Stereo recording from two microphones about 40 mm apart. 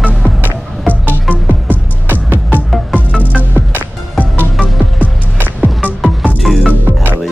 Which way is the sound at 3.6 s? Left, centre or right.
Right.